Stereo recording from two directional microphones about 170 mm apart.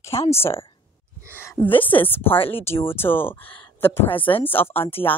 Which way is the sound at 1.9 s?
10° left (ahead or behind).